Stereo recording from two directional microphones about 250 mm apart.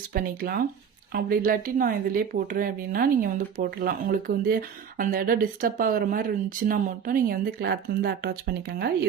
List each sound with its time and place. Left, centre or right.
0.1 s speech: right